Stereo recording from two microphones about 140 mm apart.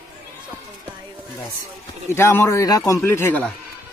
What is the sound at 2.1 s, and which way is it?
A man's voice, 20° left (ahead or behind).